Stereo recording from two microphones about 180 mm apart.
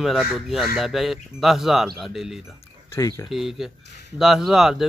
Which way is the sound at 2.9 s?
20° left (ahead or behind).